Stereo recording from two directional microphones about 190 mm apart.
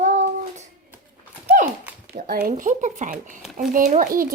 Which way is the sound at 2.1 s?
50° right (ahead or behind).